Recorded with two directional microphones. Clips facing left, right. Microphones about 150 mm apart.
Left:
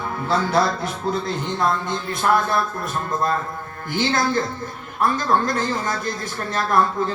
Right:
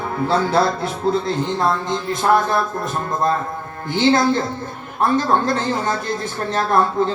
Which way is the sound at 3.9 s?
25° right (ahead or behind).